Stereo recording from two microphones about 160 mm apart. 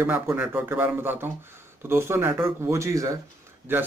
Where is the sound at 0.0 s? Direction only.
10° right (ahead or behind).